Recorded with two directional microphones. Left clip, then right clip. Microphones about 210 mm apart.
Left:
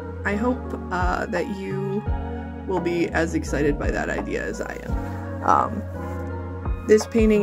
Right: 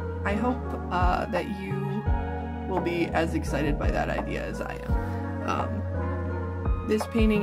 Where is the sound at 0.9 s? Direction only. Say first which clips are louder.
Left 2 dB; 15° left (ahead or behind).